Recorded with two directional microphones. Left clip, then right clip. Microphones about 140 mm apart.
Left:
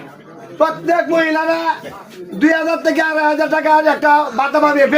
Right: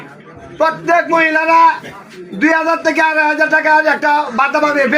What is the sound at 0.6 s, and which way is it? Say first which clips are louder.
A man's voice: right 2 dB; 15° left (ahead or behind).